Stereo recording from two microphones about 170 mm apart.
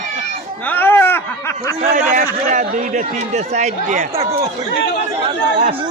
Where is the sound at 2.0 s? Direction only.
50° right (ahead or behind).